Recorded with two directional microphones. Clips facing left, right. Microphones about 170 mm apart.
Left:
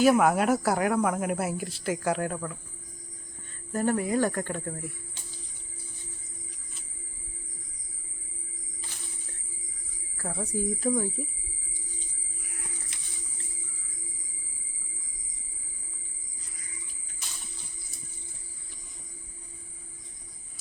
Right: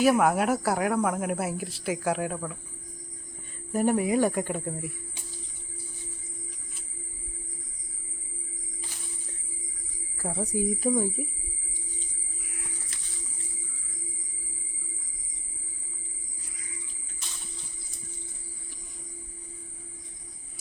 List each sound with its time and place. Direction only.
0.0 s speech: centre (ahead or behind)
3.7 s speech: 15° right (ahead or behind)
10.2 s speech: 15° right (ahead or behind)
12.9 s a sound: 20° left (ahead or behind)